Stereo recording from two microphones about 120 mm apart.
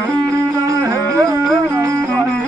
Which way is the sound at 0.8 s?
25° right (ahead or behind).